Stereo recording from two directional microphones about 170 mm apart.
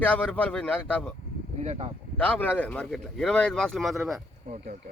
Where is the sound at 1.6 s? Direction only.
35° right (ahead or behind).